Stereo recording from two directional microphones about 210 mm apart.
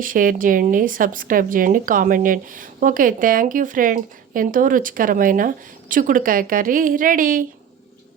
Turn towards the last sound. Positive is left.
turn(degrees=-40)  # may be behind; listen again after turning